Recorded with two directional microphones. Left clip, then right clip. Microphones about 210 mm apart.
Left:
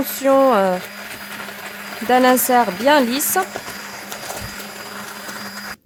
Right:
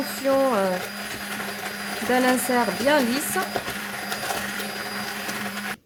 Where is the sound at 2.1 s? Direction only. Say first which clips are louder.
Left 8 dB; 45° left (ahead or behind).